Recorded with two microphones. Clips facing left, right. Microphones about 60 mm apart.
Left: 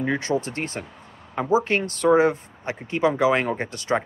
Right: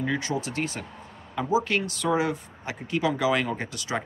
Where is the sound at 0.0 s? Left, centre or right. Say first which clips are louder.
Left 4 dB; left.